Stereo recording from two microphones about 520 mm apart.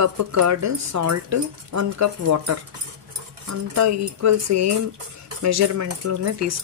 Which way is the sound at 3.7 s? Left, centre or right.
Right.